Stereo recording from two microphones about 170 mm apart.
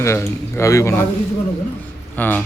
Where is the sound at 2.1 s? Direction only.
10° left (ahead or behind).